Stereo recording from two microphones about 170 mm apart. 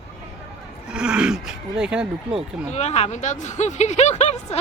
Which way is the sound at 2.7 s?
40° left (ahead or behind).